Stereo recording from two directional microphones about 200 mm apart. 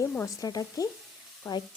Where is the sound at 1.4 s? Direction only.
20° left (ahead or behind).